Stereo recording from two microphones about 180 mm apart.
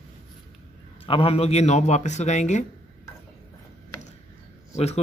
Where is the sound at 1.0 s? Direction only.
30° left (ahead or behind).